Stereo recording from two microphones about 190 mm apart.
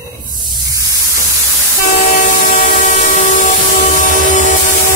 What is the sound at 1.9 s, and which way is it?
Train, 40° left (ahead or behind).